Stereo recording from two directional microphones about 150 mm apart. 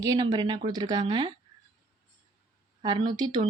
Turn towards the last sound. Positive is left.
turn(degrees=-30)  # may be behind; listen again after turning